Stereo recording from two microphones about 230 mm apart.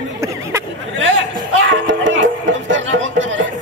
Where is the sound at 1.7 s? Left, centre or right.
Right.